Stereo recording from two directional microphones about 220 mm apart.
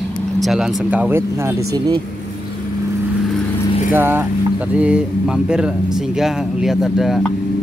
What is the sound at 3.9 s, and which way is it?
Speech, 10° right (ahead or behind).